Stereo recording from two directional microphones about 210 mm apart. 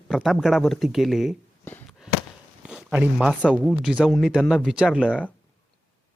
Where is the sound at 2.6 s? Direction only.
5° right (ahead or behind).